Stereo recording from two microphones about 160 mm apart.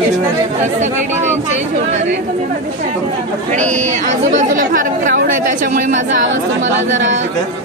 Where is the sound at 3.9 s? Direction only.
50° right (ahead or behind).